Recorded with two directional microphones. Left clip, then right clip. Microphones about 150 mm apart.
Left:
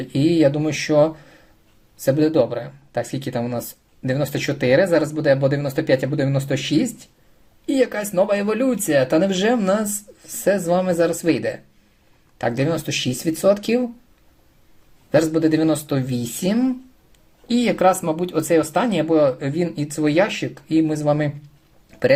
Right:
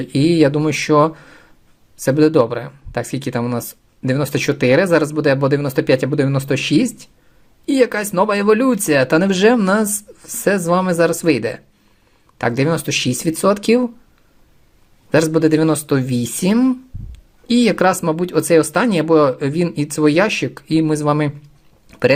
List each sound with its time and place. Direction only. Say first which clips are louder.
0.0 s speech: right 3 dB; 50° right (ahead or behind)
15.1 s speech: right 3 dB; 45° right (ahead or behind)
21.8 s a sound: right 4 dB; 45° right (ahead or behind)